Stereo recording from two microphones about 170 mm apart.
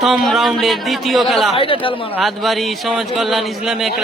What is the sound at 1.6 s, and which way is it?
Speech, 30° left (ahead or behind).